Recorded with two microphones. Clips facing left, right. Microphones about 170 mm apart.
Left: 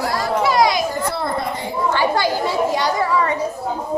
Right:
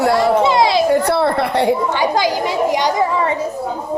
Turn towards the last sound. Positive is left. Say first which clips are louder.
# right 2 dB
turn(degrees=-20)  # may be behind; listen again after turning